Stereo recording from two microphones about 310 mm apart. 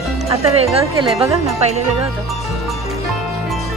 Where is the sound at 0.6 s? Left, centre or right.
Centre.